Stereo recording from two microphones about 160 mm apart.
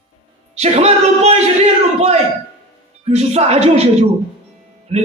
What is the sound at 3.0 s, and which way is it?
Speech, 40° right (ahead or behind).